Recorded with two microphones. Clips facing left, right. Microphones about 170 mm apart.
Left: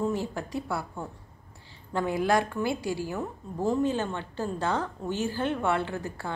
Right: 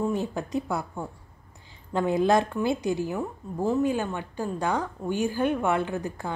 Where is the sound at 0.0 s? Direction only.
20° right (ahead or behind).